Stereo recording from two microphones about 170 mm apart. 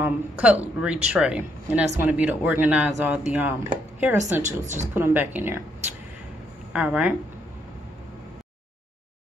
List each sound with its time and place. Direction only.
0.0 s speech: 10° right (ahead or behind)
4.2 s a woman's voice: 45° right (ahead or behind)
4.9 s speech: 10° right (ahead or behind)
6.7 s speech: 5° right (ahead or behind)